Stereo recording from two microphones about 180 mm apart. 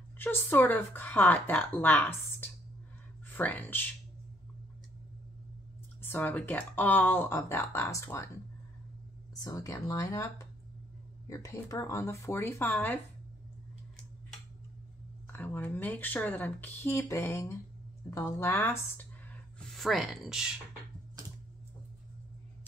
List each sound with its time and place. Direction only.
0.2 s speech: 10° left (ahead or behind)
5.9 s speech: 10° left (ahead or behind)
9.3 s speech: 20° left (ahead or behind)
15.3 s speech: 10° left (ahead or behind)
19.6 s speech: centre (ahead or behind)